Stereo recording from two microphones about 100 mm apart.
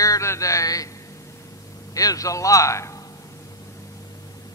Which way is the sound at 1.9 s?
35° left (ahead or behind).